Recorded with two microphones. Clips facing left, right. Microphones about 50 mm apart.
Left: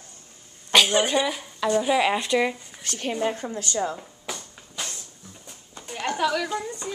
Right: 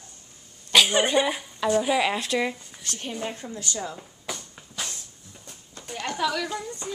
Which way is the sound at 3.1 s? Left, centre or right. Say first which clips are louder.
Left 7 dB; left.